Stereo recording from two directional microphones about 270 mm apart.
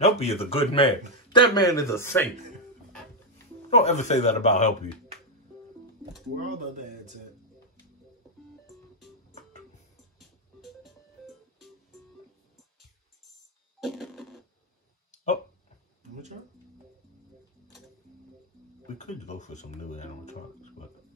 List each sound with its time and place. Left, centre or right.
0.0 s a man's voice: left
3.7 s a man's voice: left
6.4 s speech: right
10.1 s music: centre
13.7 s music: centre
18.9 s a man's voice: left